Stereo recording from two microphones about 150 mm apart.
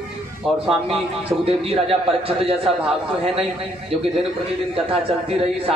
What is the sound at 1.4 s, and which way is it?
A man's voice, 40° right (ahead or behind).